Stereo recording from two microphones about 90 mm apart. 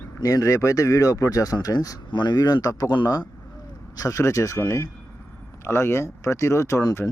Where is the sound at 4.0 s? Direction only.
35° left (ahead or behind).